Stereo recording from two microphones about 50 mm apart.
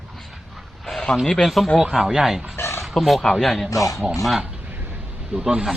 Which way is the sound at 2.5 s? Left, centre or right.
Left.